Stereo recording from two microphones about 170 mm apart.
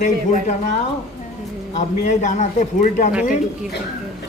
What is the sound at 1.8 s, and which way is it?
A man's voice, 45° left (ahead or behind).